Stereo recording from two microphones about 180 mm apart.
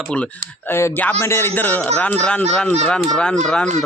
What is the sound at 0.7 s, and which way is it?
A man's voice, 10° left (ahead or behind).